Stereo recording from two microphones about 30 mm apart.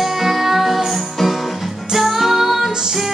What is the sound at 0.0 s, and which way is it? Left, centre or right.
Music, centre.